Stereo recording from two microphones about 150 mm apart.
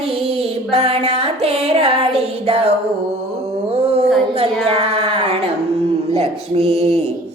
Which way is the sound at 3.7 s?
45° right (ahead or behind).